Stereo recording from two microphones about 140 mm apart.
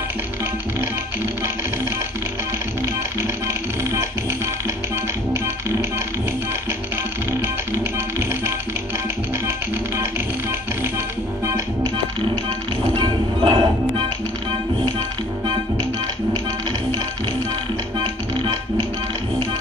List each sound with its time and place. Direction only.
0.7 s music: 20° right (ahead or behind)
2.8 s music: 20° right (ahead or behind)
7.4 s music: 20° right (ahead or behind)
11.4 s music: 20° right (ahead or behind)
12.9 s music: 35° right (ahead or behind)